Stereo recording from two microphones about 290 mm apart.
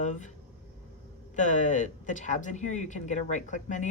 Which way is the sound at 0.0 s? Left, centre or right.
Left.